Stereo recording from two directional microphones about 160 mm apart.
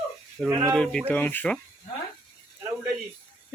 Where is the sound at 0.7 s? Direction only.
5° left (ahead or behind).